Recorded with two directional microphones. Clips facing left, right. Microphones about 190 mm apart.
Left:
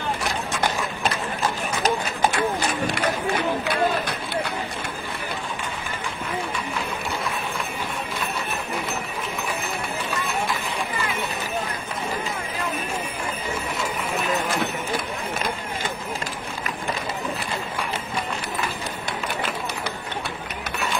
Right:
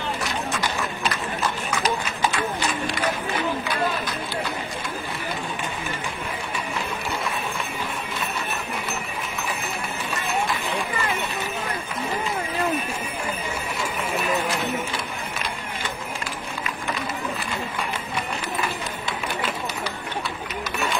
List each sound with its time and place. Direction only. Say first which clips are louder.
0.6 s horse: left 2 dB; 50° left (ahead or behind)
2.2 s horse: left 3 dB; 45° left (ahead or behind)